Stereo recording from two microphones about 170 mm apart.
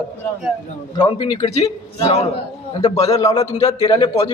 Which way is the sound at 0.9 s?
30° left (ahead or behind).